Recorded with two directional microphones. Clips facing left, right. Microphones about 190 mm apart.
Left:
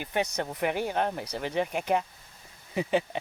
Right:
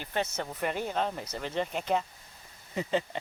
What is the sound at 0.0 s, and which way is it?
Speech, 15° left (ahead or behind).